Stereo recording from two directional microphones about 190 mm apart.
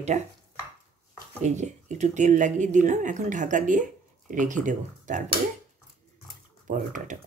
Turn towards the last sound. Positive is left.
turn(degrees=-40)  # may be behind; listen again after turning